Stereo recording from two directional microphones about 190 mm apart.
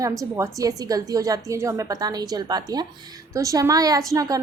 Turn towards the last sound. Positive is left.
turn(degrees=-20)  # may be behind; listen again after turning